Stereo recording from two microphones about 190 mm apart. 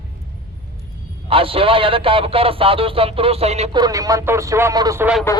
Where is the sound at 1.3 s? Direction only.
30° right (ahead or behind).